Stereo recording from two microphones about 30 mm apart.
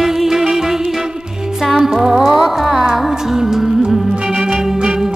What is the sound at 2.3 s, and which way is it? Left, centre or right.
Music, centre.